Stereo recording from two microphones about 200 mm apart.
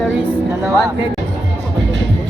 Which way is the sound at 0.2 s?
15° right (ahead or behind).